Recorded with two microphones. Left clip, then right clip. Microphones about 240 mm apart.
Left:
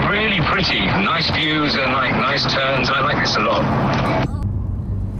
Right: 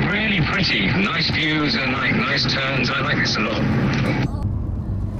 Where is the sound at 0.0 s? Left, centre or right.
Centre.